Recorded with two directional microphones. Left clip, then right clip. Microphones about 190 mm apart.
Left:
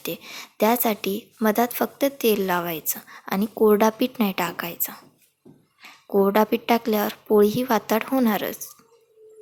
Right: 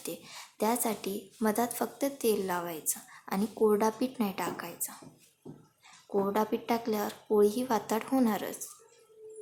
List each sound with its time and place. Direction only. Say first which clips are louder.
0.0 s speech: left 9 dB; 25° left (ahead or behind)